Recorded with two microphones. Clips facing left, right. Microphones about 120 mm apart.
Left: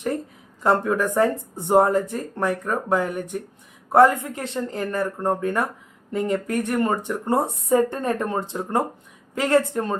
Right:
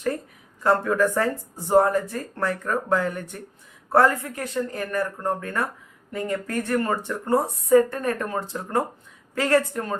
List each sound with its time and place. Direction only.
0.6 s speech: 20° left (ahead or behind)